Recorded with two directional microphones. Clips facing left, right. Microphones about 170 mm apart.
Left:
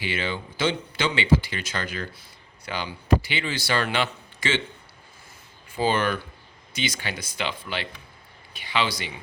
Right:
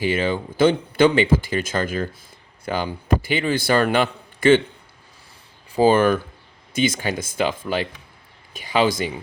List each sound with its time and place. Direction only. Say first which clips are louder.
0.0 s speech: right 8 dB; 45° right (ahead or behind)
5.7 s speech: right 8 dB; 45° right (ahead or behind)